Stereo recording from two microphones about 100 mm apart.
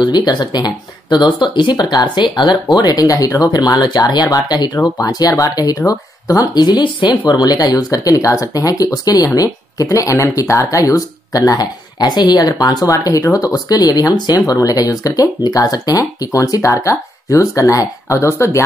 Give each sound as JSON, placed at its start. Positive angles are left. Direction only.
{"t": 0.0, "sound": "speech", "side_deg": 45}